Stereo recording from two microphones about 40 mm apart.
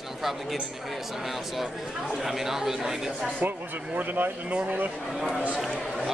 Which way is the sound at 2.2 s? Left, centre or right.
Centre.